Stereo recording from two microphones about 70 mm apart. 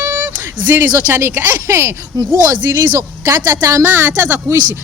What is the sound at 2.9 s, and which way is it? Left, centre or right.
Speech, right.